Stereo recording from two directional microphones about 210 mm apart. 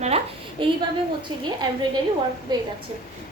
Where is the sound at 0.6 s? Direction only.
25° right (ahead or behind).